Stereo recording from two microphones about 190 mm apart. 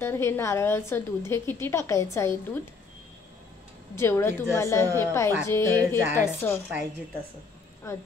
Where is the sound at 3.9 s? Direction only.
15° left (ahead or behind).